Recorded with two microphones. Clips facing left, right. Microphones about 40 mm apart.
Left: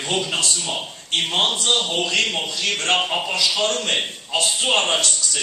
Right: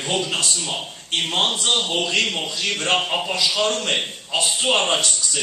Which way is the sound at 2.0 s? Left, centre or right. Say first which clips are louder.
Even; centre.